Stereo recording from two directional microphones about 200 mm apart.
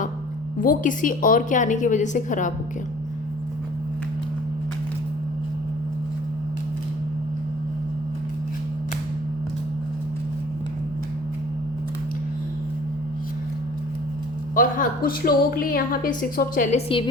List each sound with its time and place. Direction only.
0.6 s a woman's voice: 40° left (ahead or behind)
14.5 s a woman's voice: 45° left (ahead or behind)